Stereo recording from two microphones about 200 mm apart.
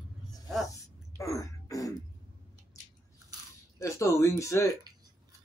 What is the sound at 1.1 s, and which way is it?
Throat clearing, 15° left (ahead or behind).